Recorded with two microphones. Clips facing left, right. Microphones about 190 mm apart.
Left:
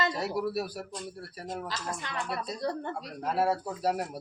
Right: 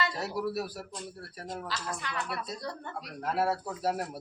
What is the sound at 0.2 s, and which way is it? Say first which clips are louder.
Speech: left 2 dB; centre (ahead or behind).